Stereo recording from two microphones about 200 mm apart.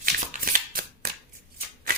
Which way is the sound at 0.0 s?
45° right (ahead or behind).